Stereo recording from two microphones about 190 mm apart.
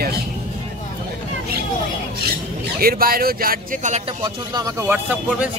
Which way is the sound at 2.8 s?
50° right (ahead or behind).